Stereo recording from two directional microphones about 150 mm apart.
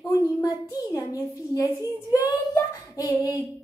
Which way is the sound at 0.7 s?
25° left (ahead or behind).